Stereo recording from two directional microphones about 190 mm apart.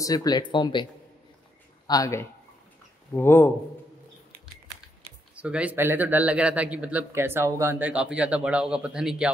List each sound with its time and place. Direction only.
0.0 s speech: 20° left (ahead or behind)
1.9 s speech: 20° left (ahead or behind)
5.3 s speech: 5° right (ahead or behind)